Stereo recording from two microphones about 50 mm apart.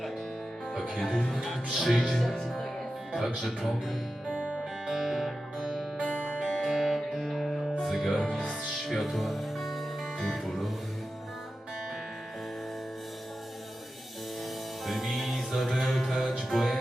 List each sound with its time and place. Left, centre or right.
0.9 s speech: centre
4.4 s music: right
4.9 s music: centre
6.1 s music: right
6.6 s music: centre
14.8 s music: centre